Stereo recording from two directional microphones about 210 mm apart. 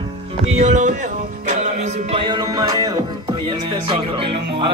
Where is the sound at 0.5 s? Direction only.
35° right (ahead or behind).